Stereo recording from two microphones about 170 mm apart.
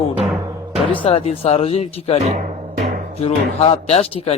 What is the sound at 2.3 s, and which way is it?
Music, 40° right (ahead or behind).